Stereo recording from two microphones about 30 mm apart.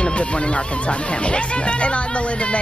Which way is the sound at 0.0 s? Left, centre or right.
Left.